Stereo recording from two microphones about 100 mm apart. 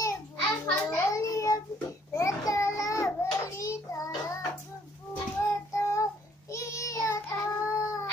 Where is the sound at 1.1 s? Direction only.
35° left (ahead or behind).